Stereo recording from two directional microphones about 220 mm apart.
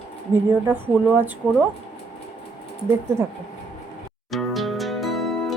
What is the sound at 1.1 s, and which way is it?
Speech, 10° right (ahead or behind).